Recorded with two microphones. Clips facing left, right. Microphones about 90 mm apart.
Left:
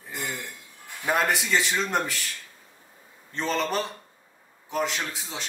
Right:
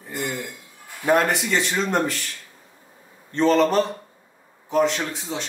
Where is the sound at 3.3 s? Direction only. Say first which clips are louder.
Right 9 dB; centre (ahead or behind).